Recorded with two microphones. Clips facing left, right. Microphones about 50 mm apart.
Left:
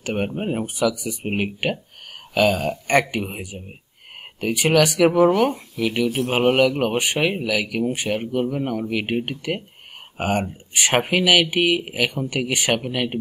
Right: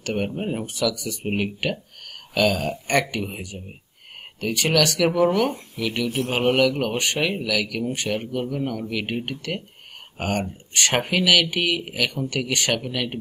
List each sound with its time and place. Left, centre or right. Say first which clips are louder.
0.0 s speech: left 1 dB; centre